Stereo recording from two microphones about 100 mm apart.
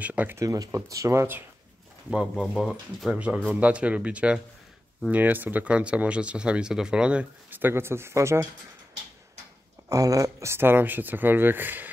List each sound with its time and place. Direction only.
0.0 s speech: 15° right (ahead or behind)
0.4 s speech: 30° right (ahead or behind)
2.0 s speech: 5° right (ahead or behind)
2.4 s speech: 5° left (ahead or behind)
3.1 s speech: 10° right (ahead or behind); by 8.5 s 30° right (ahead or behind)
9.8 s speech: 35° right (ahead or behind); by 11.9 s 20° right (ahead or behind)